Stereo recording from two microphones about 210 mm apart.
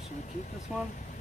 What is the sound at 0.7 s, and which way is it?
Speech, 5° right (ahead or behind).